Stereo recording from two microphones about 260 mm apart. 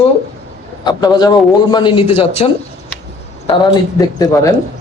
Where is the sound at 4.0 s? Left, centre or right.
Centre.